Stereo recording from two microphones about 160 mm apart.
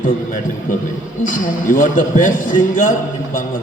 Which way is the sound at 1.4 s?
55° left (ahead or behind).